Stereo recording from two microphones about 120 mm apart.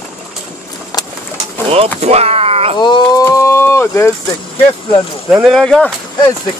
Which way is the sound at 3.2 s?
20° left (ahead or behind).